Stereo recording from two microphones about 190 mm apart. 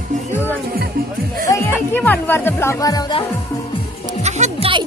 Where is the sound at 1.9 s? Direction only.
10° left (ahead or behind).